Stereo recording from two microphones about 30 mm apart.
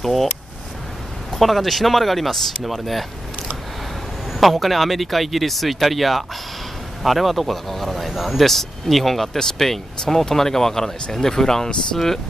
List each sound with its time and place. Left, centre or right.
0.0 s speech: centre
1.3 s speech: centre
4.4 s speech: centre